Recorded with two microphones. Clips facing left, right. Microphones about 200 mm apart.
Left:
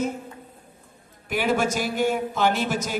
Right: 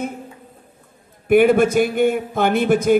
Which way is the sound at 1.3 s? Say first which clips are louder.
Right 10 dB; 55° right (ahead or behind).